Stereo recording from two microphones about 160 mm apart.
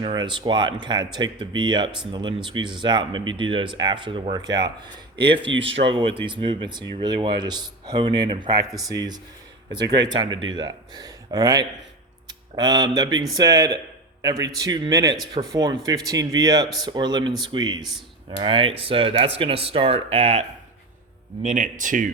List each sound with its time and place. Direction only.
0.0 s speech: 30° right (ahead or behind)
21.4 s speech: 55° right (ahead or behind)